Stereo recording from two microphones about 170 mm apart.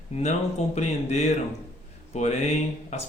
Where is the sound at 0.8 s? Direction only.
45° left (ahead or behind).